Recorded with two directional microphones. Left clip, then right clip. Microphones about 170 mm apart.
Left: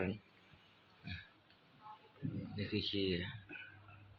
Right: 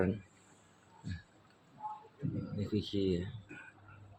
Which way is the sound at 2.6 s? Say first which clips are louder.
Right 2 dB; 25° right (ahead or behind).